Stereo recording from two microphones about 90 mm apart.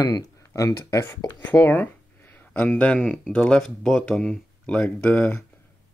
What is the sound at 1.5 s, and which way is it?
Speech, 20° left (ahead or behind).